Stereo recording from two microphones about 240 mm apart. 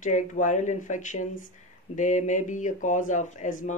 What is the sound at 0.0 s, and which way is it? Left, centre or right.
Speech, left.